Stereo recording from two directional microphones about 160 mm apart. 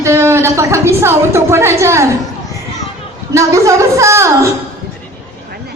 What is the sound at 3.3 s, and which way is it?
A woman's voice, 20° right (ahead or behind).